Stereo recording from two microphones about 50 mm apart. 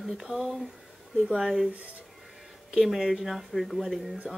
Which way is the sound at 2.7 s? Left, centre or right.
Centre.